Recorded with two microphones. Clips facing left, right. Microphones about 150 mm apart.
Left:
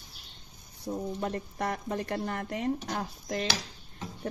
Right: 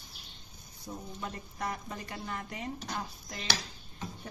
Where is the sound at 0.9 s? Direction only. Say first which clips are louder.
Left 9 dB; 40° left (ahead or behind).